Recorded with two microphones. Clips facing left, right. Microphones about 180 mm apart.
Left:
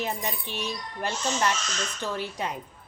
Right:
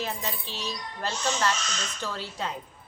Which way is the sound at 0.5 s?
60° left (ahead or behind).